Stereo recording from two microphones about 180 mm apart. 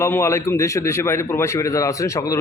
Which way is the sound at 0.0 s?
15° left (ahead or behind).